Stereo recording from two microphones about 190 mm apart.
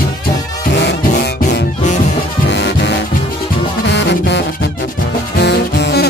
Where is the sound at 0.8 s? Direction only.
65° left (ahead or behind).